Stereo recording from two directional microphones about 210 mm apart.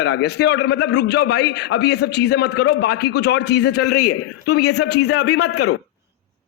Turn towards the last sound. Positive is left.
turn(degrees=90)